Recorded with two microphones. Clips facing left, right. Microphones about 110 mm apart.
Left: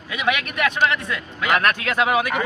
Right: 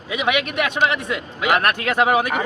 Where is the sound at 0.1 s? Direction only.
20° right (ahead or behind).